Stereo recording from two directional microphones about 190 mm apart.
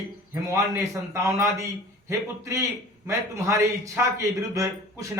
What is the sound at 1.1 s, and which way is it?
A man's voice, 15° right (ahead or behind).